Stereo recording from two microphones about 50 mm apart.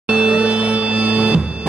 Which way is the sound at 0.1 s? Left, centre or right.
Right.